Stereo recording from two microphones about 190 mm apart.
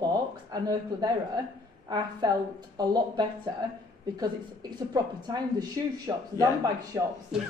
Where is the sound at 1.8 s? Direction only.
20° right (ahead or behind).